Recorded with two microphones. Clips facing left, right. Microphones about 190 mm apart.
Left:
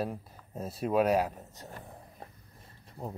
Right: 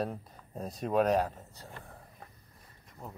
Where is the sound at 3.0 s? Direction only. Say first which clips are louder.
Left 6 dB; 30° left (ahead or behind).